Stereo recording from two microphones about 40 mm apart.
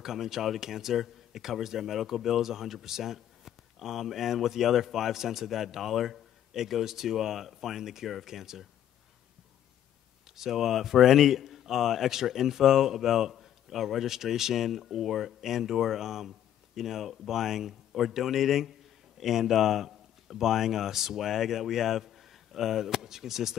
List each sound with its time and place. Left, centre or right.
0.0 s speech: centre
10.3 s speech: centre